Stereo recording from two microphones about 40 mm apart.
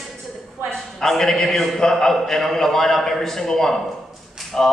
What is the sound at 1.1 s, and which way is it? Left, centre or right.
A man's voice, centre.